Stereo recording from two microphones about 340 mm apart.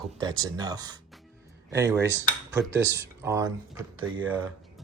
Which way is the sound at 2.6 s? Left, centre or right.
Right.